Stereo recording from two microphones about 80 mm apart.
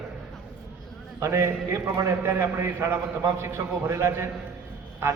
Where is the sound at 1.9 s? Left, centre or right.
Right.